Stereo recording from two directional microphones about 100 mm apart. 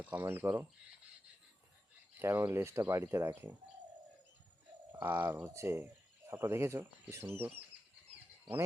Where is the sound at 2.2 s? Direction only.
25° right (ahead or behind).